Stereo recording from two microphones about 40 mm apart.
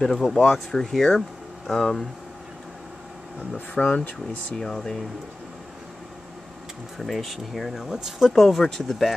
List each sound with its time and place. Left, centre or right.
0.0 s speech: centre
3.5 s speech: left
4.6 s speech: centre
7.0 s speech: centre
8.3 s speech: centre